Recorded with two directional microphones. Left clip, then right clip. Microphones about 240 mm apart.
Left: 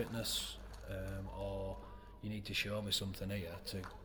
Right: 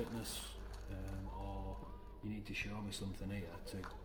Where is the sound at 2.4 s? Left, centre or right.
Left.